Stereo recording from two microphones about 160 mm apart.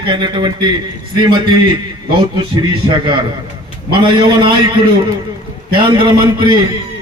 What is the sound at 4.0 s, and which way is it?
A man's voice, 30° right (ahead or behind).